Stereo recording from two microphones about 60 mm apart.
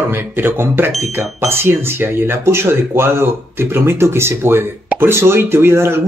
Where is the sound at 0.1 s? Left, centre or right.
Right.